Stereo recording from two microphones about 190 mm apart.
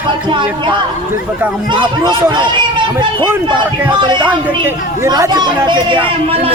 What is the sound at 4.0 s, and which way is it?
Speech, 25° right (ahead or behind).